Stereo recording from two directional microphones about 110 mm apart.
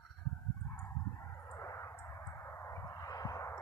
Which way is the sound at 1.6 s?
25° left (ahead or behind).